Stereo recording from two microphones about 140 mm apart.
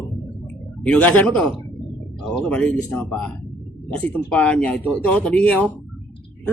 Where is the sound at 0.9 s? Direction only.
10° left (ahead or behind).